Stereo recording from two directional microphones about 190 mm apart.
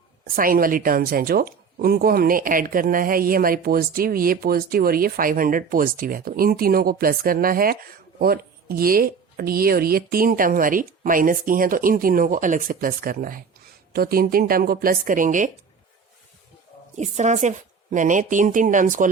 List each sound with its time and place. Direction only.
0.3 s speech: 50° right (ahead or behind)
17.0 s a woman's voice: 40° right (ahead or behind)